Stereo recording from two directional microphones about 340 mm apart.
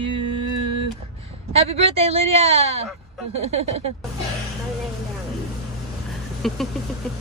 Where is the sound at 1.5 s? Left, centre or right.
Centre.